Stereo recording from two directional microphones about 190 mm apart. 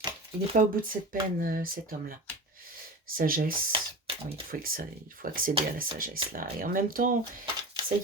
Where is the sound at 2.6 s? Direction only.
50° right (ahead or behind).